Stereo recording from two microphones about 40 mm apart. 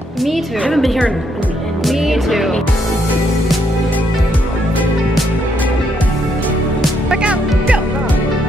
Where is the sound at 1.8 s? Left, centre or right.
Centre.